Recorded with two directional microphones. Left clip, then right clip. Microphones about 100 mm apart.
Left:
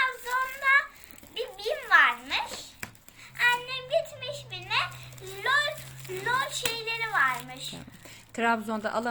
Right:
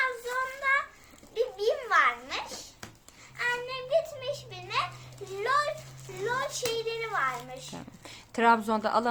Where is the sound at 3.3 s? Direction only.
35° right (ahead or behind).